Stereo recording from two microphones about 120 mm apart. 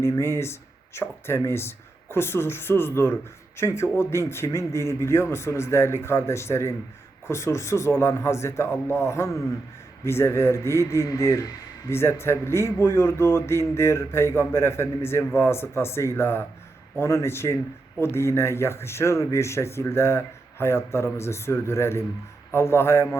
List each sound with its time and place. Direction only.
0.0 s speech: 20° left (ahead or behind)